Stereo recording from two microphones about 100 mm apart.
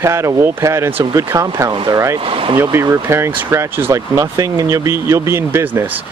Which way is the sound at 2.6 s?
25° right (ahead or behind).